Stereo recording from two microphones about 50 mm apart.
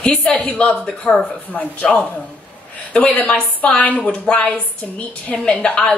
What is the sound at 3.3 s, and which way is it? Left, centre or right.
A woman's voice, left.